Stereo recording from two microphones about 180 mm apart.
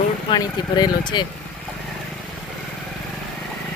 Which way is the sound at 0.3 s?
20° left (ahead or behind).